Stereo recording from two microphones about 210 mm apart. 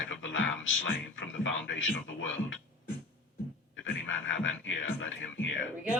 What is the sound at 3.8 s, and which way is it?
Speech, 65° left (ahead or behind).